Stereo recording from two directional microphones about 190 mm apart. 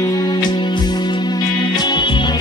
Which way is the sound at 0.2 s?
20° left (ahead or behind).